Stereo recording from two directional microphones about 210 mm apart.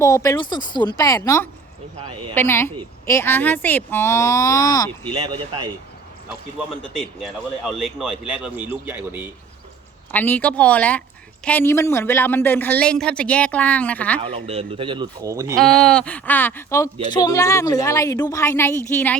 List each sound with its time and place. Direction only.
0.0 s a man's voice: 15° left (ahead or behind)
5.1 s speech: 20° right (ahead or behind)
7.2 s speech: centre (ahead or behind)
10.1 s a man's voice: 10° left (ahead or behind)
14.2 s speech: 30° right (ahead or behind)
15.6 s a man's voice: 5° left (ahead or behind)